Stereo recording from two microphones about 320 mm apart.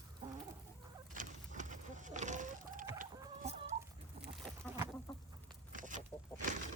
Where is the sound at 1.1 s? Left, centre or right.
Right.